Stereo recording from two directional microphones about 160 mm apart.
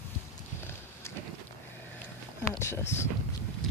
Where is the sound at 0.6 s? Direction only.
15° left (ahead or behind).